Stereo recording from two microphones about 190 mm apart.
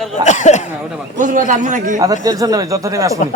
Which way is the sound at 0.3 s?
40° left (ahead or behind).